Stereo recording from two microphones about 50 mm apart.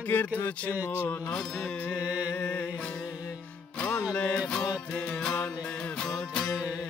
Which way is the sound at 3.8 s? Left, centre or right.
Left.